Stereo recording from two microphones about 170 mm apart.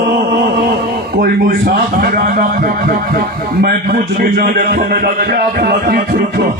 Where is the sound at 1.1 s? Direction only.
65° right (ahead or behind).